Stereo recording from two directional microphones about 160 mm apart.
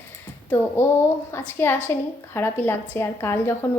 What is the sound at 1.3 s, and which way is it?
Speech, 15° left (ahead or behind).